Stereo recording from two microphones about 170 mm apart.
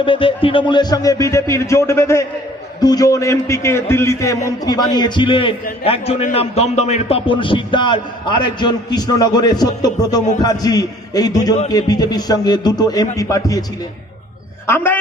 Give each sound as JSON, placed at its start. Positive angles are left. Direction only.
{"t": 0.0, "sound": "a man's voice", "side_deg": 30}
{"t": 14.7, "sound": "a man's voice", "side_deg": 15}